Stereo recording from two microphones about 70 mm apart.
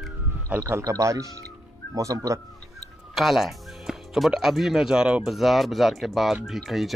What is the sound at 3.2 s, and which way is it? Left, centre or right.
Speech, centre.